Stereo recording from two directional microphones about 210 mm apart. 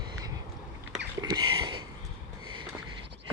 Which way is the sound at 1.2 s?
20° right (ahead or behind).